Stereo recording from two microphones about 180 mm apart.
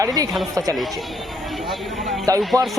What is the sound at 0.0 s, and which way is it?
Speech, 20° right (ahead or behind).